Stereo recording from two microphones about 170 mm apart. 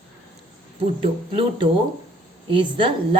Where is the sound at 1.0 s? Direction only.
30° right (ahead or behind).